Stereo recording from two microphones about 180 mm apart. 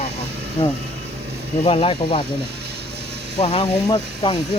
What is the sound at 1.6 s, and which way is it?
Speech, 30° left (ahead or behind).